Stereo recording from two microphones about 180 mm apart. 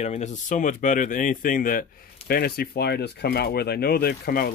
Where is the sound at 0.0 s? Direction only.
40° left (ahead or behind).